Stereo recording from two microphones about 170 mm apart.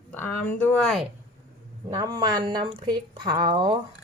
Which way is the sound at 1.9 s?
25° right (ahead or behind).